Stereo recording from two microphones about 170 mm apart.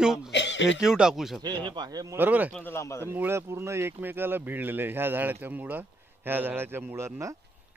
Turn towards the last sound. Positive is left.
turn(degrees=-15)  # may be behind; listen again after turning